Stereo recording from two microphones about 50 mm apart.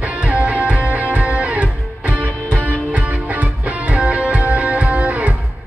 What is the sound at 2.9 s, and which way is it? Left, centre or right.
Music, right.